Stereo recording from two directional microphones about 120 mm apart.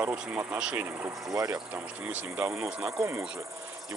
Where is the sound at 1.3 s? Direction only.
30° right (ahead or behind).